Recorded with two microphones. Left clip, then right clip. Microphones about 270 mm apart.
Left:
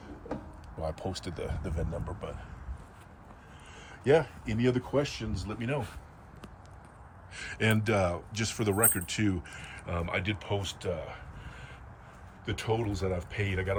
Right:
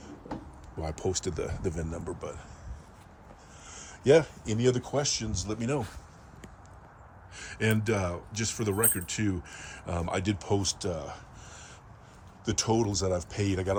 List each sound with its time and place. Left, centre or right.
0.8 s speech: right
3.7 s speech: right
7.3 s speech: centre
12.5 s speech: centre